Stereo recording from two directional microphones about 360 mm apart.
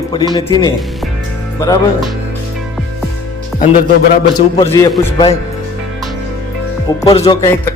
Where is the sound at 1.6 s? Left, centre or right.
Centre.